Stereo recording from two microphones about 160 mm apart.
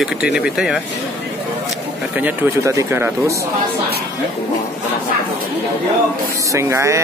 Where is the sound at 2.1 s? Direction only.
15° right (ahead or behind).